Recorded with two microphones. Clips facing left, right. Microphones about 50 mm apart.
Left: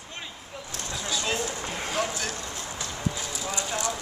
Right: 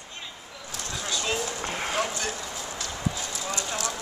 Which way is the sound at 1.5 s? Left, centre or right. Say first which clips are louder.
Right 1 dB; centre.